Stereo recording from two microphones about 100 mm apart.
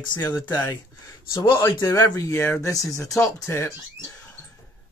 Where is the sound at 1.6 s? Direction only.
30° left (ahead or behind).